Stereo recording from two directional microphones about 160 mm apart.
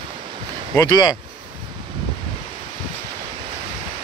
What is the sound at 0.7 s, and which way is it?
Speech, 25° left (ahead or behind).